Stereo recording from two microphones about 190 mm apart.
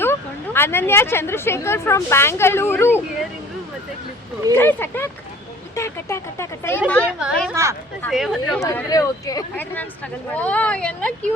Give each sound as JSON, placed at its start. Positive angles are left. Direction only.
{"t": 0.0, "sound": "speech", "side_deg": 10}
{"t": 4.5, "sound": "speech", "side_deg": 10}
{"t": 7.2, "sound": "speech", "side_deg": -5}
{"t": 7.5, "sound": "speech", "side_deg": -15}
{"t": 8.1, "sound": "speech", "side_deg": 0}
{"t": 8.6, "sound": "speech", "side_deg": 15}